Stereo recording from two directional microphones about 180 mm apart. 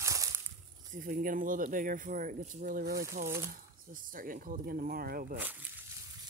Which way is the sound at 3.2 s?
15° right (ahead or behind).